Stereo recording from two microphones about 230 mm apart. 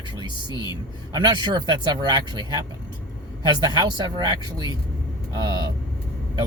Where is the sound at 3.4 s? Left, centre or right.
Centre.